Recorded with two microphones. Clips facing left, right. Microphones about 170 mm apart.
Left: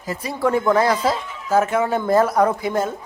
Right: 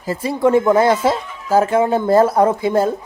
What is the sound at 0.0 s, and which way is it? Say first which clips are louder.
Speech: right 5 dB; 30° right (ahead or behind).